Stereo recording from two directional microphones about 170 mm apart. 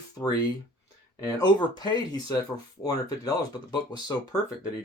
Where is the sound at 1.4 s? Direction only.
25° left (ahead or behind).